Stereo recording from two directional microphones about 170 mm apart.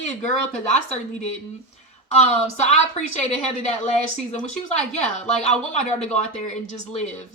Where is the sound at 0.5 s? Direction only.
45° left (ahead or behind).